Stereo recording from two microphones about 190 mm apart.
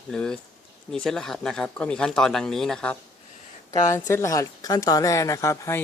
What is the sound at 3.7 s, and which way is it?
Speech, 15° left (ahead or behind).